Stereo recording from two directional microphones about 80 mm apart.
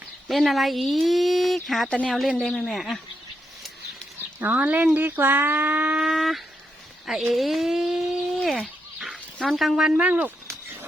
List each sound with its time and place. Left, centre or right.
0.3 s speech: centre
4.5 s speech: right
6.0 s speech: centre
8.4 s fowl: centre
9.4 s speech: centre
10.4 s a sound: right